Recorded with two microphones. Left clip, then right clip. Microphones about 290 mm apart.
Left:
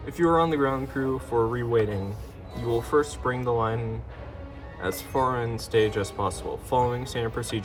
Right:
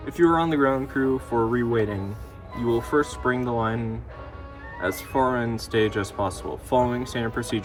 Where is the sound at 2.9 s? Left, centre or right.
Right.